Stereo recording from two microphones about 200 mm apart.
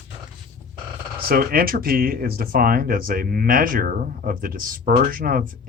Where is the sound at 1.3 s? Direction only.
50° right (ahead or behind).